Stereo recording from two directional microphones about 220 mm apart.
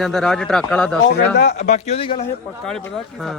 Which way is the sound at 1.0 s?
50° left (ahead or behind).